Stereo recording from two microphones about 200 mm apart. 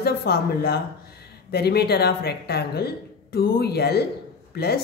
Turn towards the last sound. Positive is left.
turn(degrees=50)  # may be behind; listen again after turning